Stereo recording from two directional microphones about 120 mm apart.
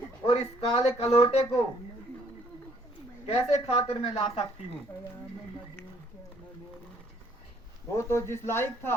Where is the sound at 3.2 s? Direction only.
55° left (ahead or behind).